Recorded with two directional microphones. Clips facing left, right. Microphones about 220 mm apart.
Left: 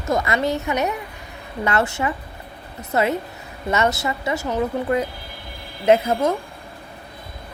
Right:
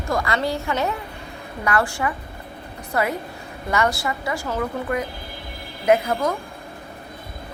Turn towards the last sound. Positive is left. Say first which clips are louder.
# left 2 dB
turn(degrees=25)  # may be behind; listen again after turning